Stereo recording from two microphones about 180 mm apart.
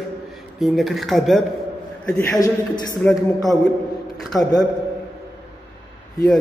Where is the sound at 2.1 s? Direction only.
10° left (ahead or behind).